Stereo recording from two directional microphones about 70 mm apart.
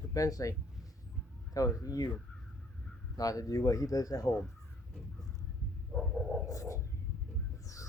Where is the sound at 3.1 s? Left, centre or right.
Left.